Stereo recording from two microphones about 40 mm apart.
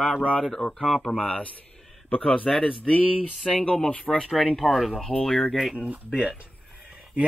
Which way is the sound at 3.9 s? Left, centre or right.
Left.